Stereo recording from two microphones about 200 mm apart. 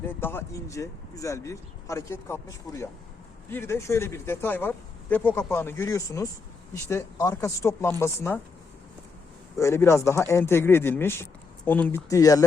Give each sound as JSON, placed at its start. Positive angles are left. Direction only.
{"t": 0.0, "sound": "speech", "side_deg": 10}
{"t": 9.6, "sound": "speech", "side_deg": 15}